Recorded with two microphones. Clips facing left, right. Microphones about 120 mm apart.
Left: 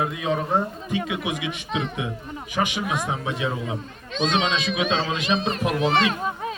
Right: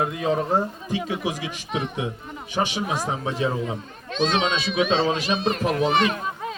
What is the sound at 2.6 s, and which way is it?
Speech, 30° right (ahead or behind).